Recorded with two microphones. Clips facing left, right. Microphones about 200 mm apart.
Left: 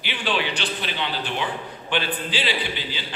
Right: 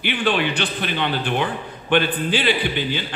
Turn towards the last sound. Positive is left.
turn(degrees=-55)  # may be behind; listen again after turning